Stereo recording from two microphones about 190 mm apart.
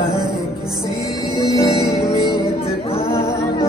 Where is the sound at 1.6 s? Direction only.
15° left (ahead or behind).